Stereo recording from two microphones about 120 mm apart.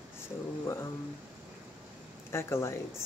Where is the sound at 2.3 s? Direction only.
20° left (ahead or behind).